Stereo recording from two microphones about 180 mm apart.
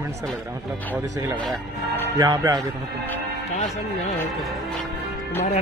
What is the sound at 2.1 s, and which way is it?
Speech, 20° right (ahead or behind).